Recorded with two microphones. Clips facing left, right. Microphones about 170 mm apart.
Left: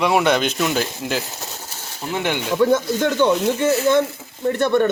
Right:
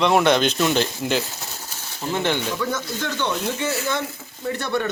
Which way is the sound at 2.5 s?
55° left (ahead or behind).